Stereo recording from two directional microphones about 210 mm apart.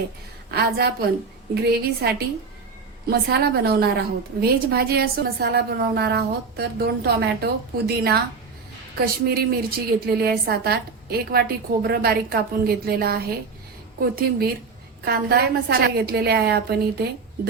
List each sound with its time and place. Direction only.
0.5 s a woman's voice: 50° right (ahead or behind)